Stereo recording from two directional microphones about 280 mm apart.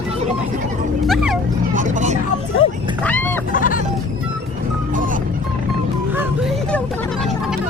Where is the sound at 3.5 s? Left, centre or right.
Left.